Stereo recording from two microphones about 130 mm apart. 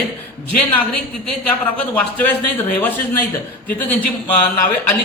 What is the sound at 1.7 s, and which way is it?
Speech, 10° left (ahead or behind).